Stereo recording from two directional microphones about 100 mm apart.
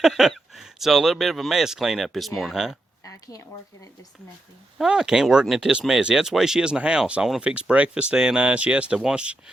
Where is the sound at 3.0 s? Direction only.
35° left (ahead or behind).